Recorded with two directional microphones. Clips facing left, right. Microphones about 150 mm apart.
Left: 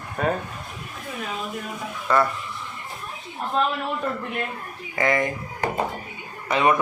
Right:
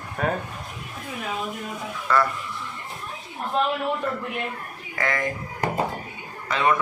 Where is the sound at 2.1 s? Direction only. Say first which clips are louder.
Left 1 dB; 20° left (ahead or behind).